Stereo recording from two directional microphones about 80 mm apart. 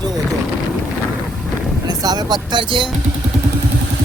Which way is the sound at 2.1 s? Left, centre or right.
Right.